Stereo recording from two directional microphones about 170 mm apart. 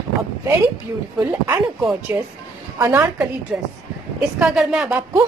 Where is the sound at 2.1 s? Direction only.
15° right (ahead or behind).